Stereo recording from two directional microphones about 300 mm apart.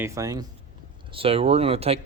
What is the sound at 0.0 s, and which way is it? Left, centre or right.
A man's voice, centre.